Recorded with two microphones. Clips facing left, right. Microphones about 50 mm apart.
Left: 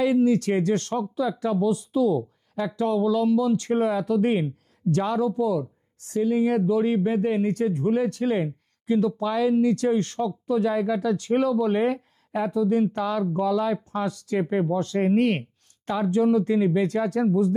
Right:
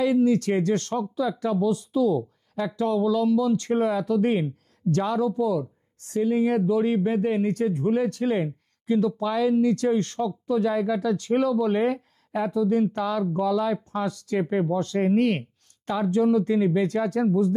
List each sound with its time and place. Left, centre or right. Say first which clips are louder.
0.0 s speech: even; centre
13.7 s speech: even; centre